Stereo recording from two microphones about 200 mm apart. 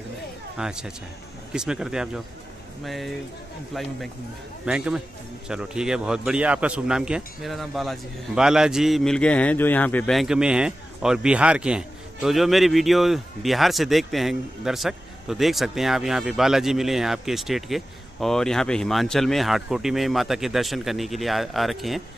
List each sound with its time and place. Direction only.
0.6 s a man's voice: 5° right (ahead or behind)